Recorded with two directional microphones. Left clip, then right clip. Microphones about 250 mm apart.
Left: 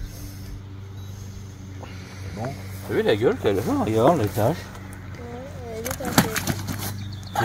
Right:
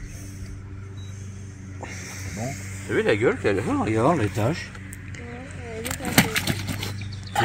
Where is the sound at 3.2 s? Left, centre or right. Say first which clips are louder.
Left 1 dB; left.